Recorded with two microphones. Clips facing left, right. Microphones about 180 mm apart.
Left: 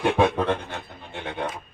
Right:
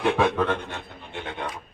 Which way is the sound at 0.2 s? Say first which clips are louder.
Left 1 dB; 25° left (ahead or behind).